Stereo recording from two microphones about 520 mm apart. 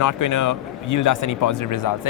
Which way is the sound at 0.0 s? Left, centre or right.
Left.